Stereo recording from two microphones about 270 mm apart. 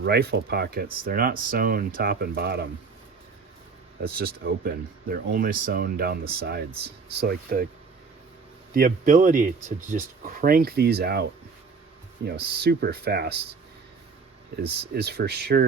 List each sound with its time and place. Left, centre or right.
0.0 s speech: right
4.0 s speech: right
8.7 s speech: right
14.6 s speech: right